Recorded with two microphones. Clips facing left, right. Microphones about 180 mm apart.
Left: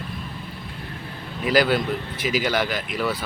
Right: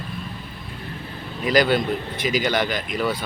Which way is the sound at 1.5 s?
5° left (ahead or behind).